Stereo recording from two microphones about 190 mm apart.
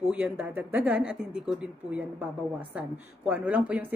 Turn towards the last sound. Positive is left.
turn(degrees=-5)  # may be behind; listen again after turning